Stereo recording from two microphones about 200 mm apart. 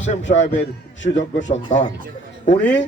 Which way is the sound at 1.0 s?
65° left (ahead or behind).